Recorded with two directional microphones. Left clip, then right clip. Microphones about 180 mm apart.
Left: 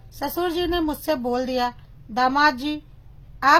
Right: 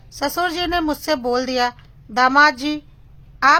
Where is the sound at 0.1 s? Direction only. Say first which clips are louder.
Right 4 dB; 15° right (ahead or behind).